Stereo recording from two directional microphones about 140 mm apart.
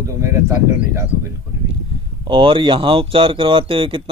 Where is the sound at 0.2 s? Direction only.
20° right (ahead or behind).